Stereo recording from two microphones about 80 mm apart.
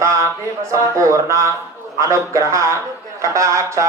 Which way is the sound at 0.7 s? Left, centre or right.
Right.